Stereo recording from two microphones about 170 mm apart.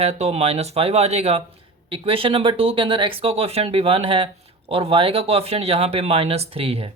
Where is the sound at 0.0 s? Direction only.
40° right (ahead or behind).